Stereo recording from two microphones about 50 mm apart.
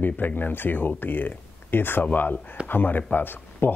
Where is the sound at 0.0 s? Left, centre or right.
Left.